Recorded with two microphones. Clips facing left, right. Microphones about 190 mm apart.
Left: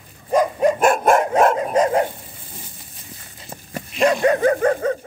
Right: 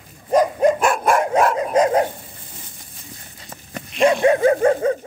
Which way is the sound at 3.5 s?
5° left (ahead or behind).